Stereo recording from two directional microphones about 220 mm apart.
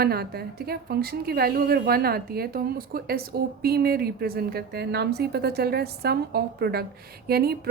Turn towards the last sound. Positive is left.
turn(degrees=-45)  # may be behind; listen again after turning